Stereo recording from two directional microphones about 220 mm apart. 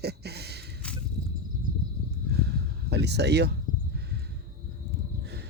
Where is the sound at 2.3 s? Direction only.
45° right (ahead or behind).